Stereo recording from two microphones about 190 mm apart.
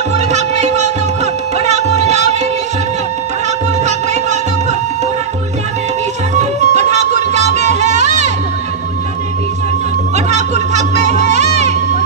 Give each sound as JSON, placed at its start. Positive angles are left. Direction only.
{"t": 0.3, "sound": "music", "side_deg": -40}
{"t": 3.8, "sound": "music", "side_deg": -35}
{"t": 6.3, "sound": "music", "side_deg": -40}
{"t": 10.1, "sound": "music", "side_deg": -35}